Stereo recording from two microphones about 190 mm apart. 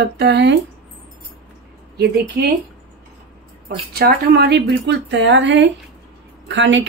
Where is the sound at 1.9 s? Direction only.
55° right (ahead or behind).